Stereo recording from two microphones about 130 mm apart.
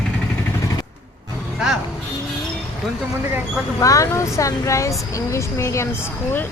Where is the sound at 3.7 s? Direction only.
25° left (ahead or behind).